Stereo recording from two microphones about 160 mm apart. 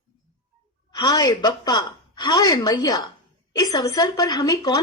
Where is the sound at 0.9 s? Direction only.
25° left (ahead or behind).